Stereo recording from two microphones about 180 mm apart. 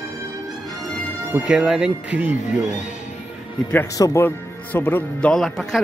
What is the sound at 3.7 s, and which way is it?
Speech, 15° left (ahead or behind).